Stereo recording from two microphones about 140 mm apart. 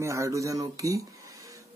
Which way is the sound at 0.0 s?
20° right (ahead or behind).